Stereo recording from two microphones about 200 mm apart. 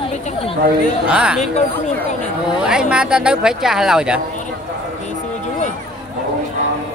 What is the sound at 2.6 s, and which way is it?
Speech, 5° right (ahead or behind).